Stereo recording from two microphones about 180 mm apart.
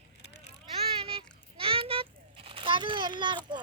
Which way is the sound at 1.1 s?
30° right (ahead or behind).